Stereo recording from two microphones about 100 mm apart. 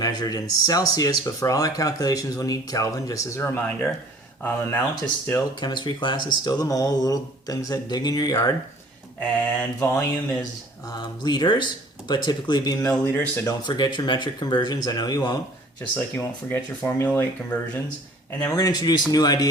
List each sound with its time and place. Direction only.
0.0 s speech: 40° left (ahead or behind)
3.6 s speech: 15° left (ahead or behind)
5.5 s speech: 50° left (ahead or behind)
9.2 s speech: 10° left (ahead or behind)
9.8 s speech: 25° left (ahead or behind)
10.8 s speech: 45° left (ahead or behind)
13.1 s speech: 20° left (ahead or behind)
13.7 s speech: 50° left (ahead or behind)
15.8 s speech: 20° left (ahead or behind)
18.5 s speech: 40° left (ahead or behind)